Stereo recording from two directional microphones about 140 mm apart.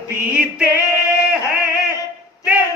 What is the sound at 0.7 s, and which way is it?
Female singing, 20° left (ahead or behind).